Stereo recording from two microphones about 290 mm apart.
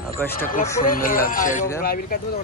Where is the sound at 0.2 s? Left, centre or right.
Centre.